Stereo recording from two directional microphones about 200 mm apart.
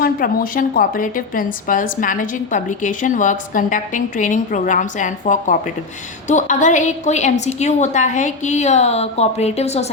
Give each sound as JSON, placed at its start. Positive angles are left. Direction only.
{"t": 0.0, "sound": "a woman's voice", "side_deg": 45}